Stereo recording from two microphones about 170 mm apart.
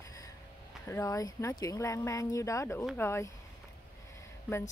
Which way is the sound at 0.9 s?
20° left (ahead or behind).